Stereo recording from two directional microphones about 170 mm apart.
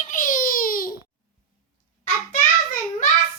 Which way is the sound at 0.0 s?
50° left (ahead or behind).